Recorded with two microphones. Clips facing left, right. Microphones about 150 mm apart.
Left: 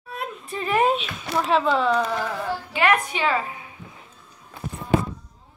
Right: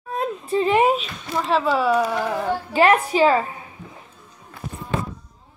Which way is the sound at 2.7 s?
35° right (ahead or behind).